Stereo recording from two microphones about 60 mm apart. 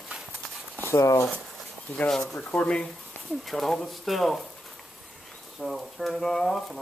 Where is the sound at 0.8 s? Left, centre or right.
Left.